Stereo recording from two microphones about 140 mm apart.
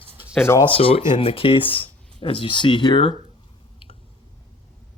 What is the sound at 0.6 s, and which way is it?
Speech, 40° left (ahead or behind).